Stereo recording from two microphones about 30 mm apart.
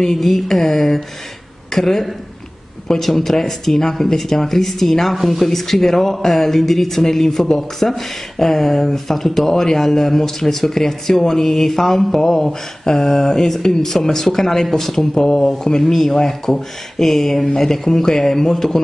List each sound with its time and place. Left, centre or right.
0.0 s speech: centre
15.8 s speech: centre